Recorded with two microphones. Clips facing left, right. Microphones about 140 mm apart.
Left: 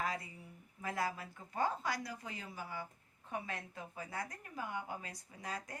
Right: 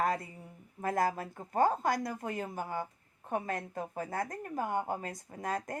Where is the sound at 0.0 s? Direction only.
50° right (ahead or behind).